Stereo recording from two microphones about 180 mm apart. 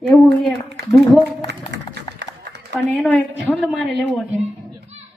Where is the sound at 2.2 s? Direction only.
70° right (ahead or behind).